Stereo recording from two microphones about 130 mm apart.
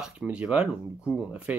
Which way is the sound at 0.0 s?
5° right (ahead or behind).